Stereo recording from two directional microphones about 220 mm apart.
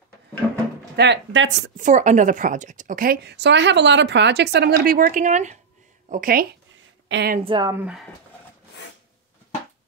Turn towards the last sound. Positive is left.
turn(degrees=-5)  # may be behind; listen again after turning